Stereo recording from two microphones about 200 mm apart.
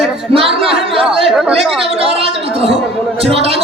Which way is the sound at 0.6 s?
30° right (ahead or behind).